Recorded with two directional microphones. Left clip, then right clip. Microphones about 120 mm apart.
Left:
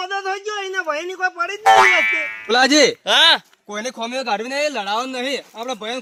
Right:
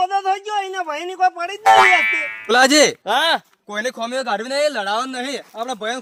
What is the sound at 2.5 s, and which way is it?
Speech, 65° right (ahead or behind).